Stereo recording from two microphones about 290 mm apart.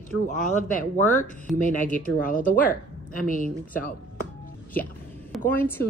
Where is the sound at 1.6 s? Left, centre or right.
Left.